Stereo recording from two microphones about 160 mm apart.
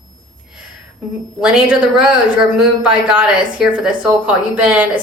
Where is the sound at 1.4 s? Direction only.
5° right (ahead or behind).